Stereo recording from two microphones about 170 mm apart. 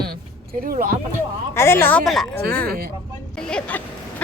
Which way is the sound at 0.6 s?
60° right (ahead or behind).